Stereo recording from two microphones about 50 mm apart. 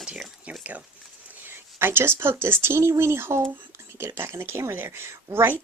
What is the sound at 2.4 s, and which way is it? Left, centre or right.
Speech, right.